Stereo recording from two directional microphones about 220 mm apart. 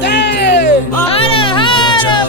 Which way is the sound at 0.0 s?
50° left (ahead or behind).